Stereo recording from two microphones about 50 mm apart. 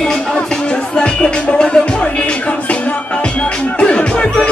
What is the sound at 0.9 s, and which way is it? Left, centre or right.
Music, left.